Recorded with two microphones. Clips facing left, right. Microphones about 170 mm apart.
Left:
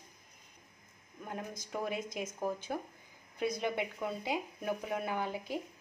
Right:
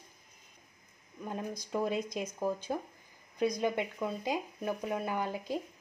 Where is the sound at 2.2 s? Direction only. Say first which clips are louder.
Right 3 dB; 20° left (ahead or behind).